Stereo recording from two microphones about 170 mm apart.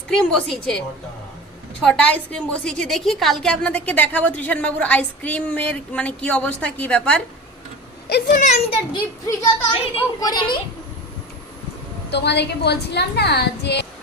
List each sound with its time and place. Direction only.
0.1 s a woman's voice: 5° left (ahead or behind)
1.8 s a woman's voice: 5° left (ahead or behind)
8.1 s speech: 50° left (ahead or behind)
8.9 s a child's voice: 20° left (ahead or behind)
12.1 s a woman's voice: 80° left